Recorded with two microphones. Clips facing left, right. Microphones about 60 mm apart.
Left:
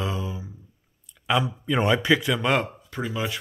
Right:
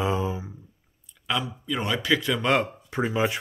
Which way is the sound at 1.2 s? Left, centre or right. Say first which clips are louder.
Left 4 dB; left.